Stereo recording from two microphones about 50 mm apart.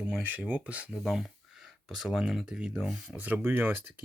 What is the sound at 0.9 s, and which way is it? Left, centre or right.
Speech, centre.